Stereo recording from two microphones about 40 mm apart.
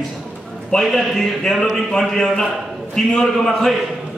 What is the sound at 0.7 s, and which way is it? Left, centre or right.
A man's voice, centre.